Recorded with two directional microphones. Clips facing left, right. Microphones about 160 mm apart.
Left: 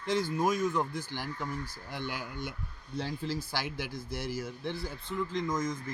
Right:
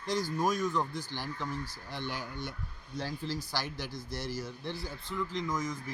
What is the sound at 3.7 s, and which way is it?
Speech, 55° left (ahead or behind).